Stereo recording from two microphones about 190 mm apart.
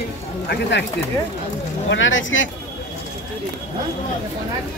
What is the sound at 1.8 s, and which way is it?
Speech, 85° left.